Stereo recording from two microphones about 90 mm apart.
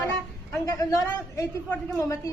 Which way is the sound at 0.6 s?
35° left (ahead or behind).